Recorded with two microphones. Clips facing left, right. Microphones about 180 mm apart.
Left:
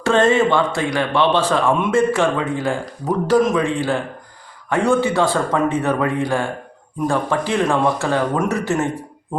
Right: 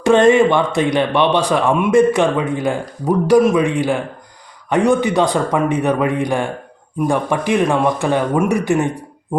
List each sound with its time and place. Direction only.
0.0 s a man's voice: 15° right (ahead or behind)